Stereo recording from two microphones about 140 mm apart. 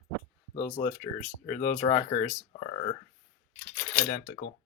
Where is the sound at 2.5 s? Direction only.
55° left (ahead or behind).